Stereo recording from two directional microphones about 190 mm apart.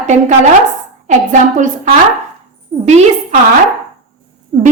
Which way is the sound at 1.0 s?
40° right (ahead or behind).